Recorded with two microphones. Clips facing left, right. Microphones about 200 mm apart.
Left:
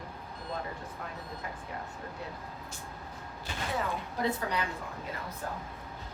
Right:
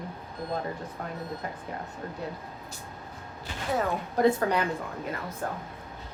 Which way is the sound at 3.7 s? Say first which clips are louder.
Right 8 dB; 50° right (ahead or behind).